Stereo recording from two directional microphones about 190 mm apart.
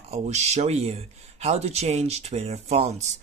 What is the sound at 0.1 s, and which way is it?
Speech, 35° right (ahead or behind).